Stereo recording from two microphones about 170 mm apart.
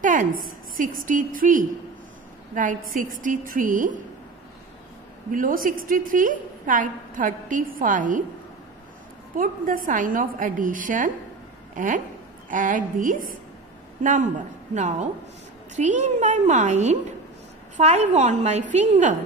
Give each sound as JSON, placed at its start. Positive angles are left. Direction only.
{"t": 0.0, "sound": "a woman's voice", "side_deg": -50}
{"t": 5.3, "sound": "a woman's voice", "side_deg": -55}
{"t": 9.4, "sound": "a woman's voice", "side_deg": -55}
{"t": 14.7, "sound": "a woman's voice", "side_deg": -45}